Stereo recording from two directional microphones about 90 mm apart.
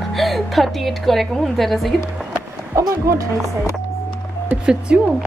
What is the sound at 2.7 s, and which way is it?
Speech, 35° right (ahead or behind).